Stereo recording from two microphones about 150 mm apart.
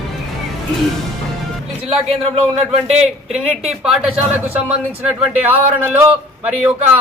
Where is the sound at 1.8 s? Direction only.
40° right (ahead or behind).